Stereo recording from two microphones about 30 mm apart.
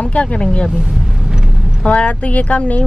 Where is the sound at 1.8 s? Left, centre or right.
Left.